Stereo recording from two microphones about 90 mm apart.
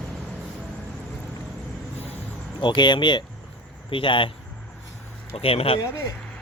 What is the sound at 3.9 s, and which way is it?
Speech, 70° left (ahead or behind).